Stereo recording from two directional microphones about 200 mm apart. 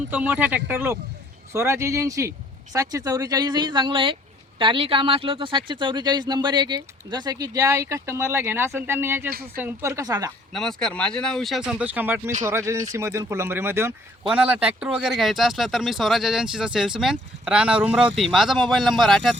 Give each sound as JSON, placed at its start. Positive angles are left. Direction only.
{"t": 0.1, "sound": "speech", "side_deg": -10}
{"t": 10.5, "sound": "speech", "side_deg": 0}